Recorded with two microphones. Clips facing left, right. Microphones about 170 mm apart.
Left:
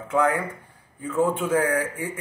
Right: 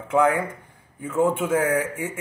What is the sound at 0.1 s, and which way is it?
Speech, 20° right (ahead or behind).